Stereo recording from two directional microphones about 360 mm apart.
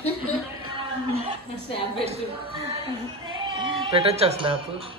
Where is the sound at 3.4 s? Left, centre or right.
Centre.